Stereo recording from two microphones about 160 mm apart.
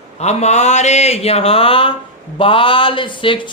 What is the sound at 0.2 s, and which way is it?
Speech, 45° left (ahead or behind).